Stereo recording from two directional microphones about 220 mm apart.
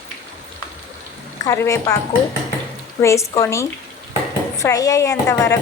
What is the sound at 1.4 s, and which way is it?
Speech, 15° left (ahead or behind).